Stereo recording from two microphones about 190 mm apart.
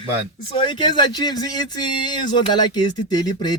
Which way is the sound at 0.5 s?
25° left (ahead or behind).